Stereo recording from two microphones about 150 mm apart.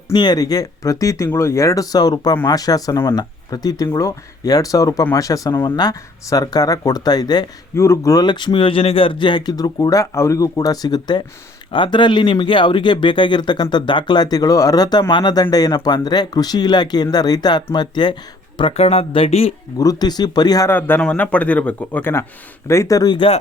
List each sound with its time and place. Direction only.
0.1 s speech: 30° left (ahead or behind)
19.8 s speech: 25° left (ahead or behind)
20.7 s speech: 15° left (ahead or behind); by 23.4 s 35° left (ahead or behind)